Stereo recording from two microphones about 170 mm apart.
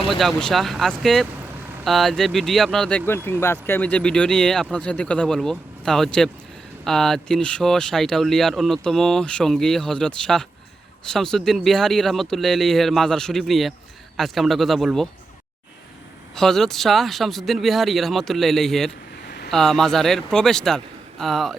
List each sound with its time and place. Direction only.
0.1 s speech: centre (ahead or behind)
3.4 s speech: 15° left (ahead or behind)
16.3 s speech: 5° left (ahead or behind)